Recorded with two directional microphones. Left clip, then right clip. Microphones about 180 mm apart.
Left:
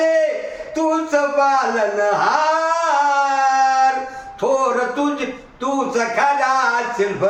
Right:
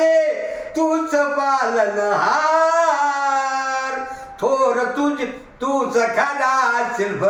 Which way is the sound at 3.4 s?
15° left (ahead or behind).